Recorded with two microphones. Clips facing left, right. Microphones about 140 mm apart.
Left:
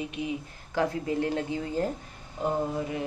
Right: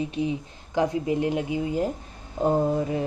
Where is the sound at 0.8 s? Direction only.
20° right (ahead or behind).